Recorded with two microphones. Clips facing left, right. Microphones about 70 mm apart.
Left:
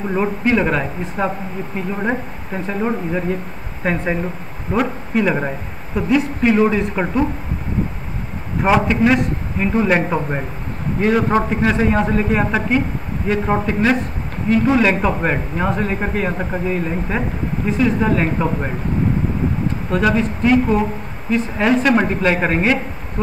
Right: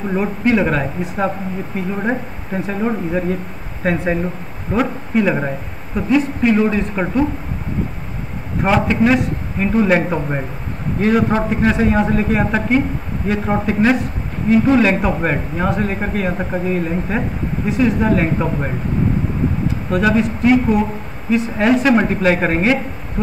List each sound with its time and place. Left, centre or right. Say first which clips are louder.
0.1 s speech: right 1 dB; centre
8.6 s speech: even; centre
19.9 s speech: right 2 dB; centre